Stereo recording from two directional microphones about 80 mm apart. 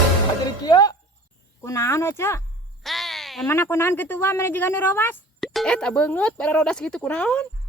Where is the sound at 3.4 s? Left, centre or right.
Left.